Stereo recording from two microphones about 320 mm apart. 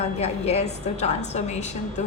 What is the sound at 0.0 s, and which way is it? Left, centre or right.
A woman's voice, centre.